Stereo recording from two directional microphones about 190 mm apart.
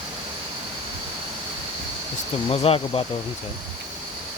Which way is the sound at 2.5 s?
30° left (ahead or behind).